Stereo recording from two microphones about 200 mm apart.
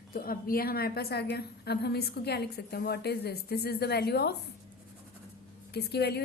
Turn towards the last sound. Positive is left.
turn(degrees=55)  # may be behind; listen again after turning